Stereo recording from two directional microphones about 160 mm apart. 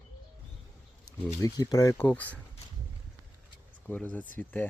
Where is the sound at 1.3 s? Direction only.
20° left (ahead or behind).